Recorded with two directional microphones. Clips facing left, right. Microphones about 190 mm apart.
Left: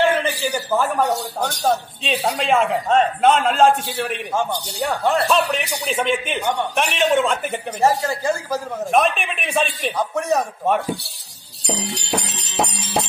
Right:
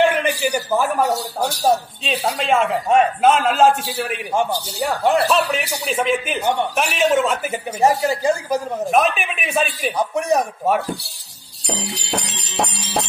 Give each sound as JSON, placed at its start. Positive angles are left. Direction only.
{"t": 0.0, "sound": "speech", "side_deg": -15}
{"t": 2.9, "sound": "speech", "side_deg": -10}
{"t": 7.8, "sound": "speech", "side_deg": -15}
{"t": 8.9, "sound": "speech", "side_deg": 0}
{"t": 9.9, "sound": "speech", "side_deg": -15}